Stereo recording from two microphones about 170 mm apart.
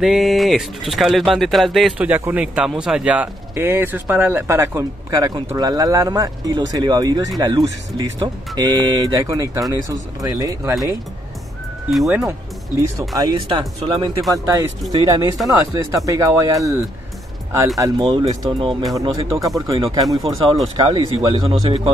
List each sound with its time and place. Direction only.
0.0 s speech: centre (ahead or behind); by 10.8 s 20° right (ahead or behind)
12.1 s speech: 15° right (ahead or behind)
17.7 s speech: 20° right (ahead or behind)
18.9 s speech: 20° right (ahead or behind)